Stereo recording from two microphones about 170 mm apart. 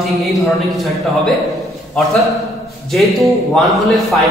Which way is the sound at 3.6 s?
Centre (ahead or behind).